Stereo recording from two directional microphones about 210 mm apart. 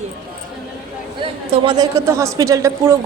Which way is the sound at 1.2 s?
25° right (ahead or behind).